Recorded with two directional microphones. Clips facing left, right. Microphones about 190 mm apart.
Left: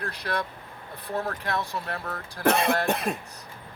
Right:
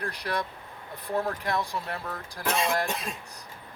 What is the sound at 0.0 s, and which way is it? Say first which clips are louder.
Speech: left 1 dB; 15° right (ahead or behind).